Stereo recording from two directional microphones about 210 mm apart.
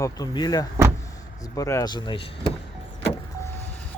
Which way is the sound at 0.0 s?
20° left (ahead or behind).